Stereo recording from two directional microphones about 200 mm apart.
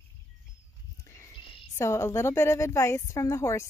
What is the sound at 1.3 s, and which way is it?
Cricket, 25° left (ahead or behind).